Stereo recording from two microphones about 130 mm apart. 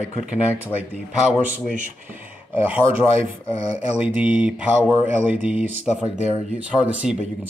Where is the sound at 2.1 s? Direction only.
15° right (ahead or behind).